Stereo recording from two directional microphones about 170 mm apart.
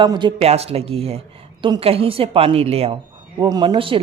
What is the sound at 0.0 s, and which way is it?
A woman's voice, 25° right (ahead or behind).